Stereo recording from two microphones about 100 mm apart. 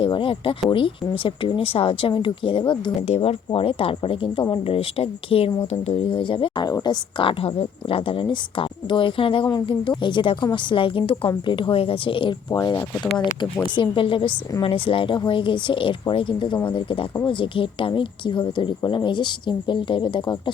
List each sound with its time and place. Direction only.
0.0 s speech: 55° left (ahead or behind)
3.1 s speech: 75° left (ahead or behind)
5.8 s speech: 90° left
6.1 s speech: 55° left (ahead or behind)
6.7 s speech: 40° left (ahead or behind); by 12.4 s 60° left (ahead or behind)
12.5 s speech: 40° left (ahead or behind)
13.4 s speech: 50° left (ahead or behind)